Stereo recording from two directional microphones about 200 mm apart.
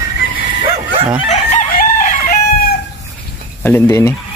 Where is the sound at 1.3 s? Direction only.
40° left (ahead or behind).